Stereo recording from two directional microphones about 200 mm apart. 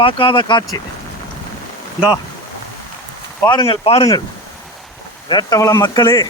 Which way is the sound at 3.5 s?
25° left (ahead or behind).